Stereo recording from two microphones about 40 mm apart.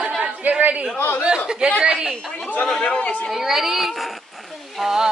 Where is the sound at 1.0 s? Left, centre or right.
Left.